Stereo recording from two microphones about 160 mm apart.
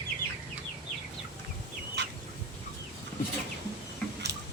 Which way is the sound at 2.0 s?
90° right.